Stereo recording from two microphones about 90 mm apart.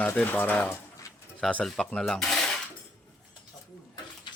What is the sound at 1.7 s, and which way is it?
Speech, 5° left (ahead or behind).